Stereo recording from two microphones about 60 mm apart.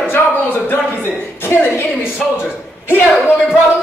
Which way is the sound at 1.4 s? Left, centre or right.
Left.